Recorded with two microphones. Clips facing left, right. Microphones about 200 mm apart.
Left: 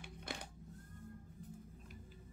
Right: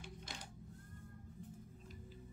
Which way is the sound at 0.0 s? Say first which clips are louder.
Left 4 dB; 60° left (ahead or behind).